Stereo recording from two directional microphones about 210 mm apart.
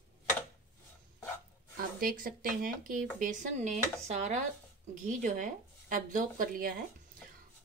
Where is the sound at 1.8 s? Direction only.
45° right (ahead or behind).